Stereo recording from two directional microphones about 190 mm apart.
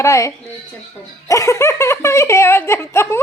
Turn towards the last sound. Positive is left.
turn(degrees=15)  # may be behind; listen again after turning